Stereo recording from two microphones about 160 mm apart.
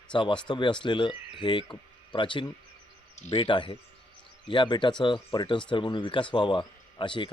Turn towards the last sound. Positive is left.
turn(degrees=30)  # may be behind; listen again after turning